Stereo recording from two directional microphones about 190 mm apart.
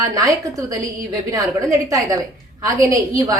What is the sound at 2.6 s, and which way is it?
Speech, 15° right (ahead or behind).